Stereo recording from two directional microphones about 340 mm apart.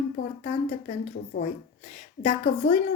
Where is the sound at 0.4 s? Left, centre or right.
Left.